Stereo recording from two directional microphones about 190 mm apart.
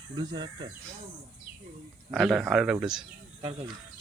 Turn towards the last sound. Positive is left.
turn(degrees=-5)  # may be behind; listen again after turning